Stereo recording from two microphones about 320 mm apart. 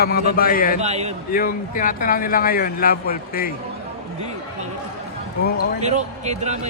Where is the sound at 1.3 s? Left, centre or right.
Left.